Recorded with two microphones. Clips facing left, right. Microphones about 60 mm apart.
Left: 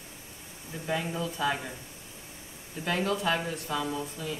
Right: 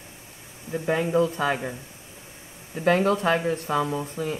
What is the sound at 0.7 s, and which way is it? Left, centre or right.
Speech, right.